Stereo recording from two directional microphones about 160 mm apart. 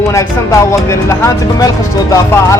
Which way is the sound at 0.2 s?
20° left (ahead or behind).